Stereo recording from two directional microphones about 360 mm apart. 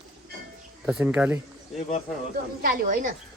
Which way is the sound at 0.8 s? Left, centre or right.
Centre.